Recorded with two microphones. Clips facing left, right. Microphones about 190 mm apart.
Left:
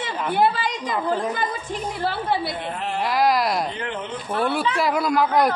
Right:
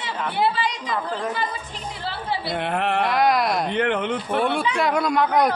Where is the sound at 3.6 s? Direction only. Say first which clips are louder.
Right 7 dB; 65° right (ahead or behind).